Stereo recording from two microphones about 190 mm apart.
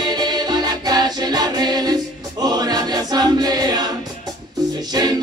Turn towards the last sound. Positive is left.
turn(degrees=-20)  # may be behind; listen again after turning